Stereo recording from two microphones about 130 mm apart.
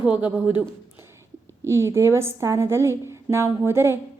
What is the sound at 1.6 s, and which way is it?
A woman's voice, 20° right (ahead or behind).